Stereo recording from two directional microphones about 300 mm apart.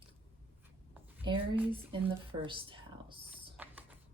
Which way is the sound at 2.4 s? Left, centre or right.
Centre.